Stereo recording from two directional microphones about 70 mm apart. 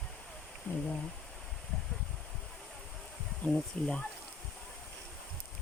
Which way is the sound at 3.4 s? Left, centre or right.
Centre.